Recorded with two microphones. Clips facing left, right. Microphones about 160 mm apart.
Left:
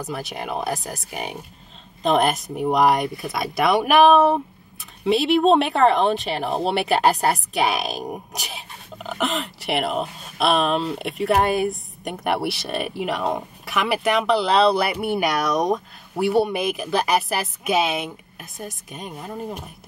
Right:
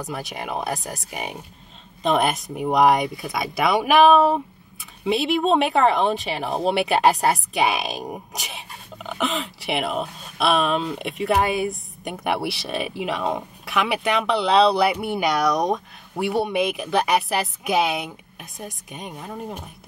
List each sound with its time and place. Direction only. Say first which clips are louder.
0.0 s speech: left 1 dB; centre (ahead or behind)